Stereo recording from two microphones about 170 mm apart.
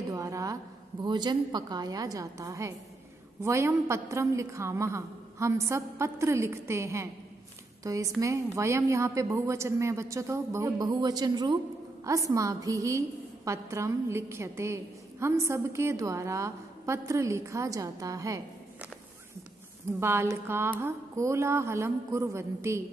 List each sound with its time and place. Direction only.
0.1 s a sound: 20° right (ahead or behind)
1.0 s a woman's voice: 25° right (ahead or behind)
20.0 s a woman's voice: 15° right (ahead or behind)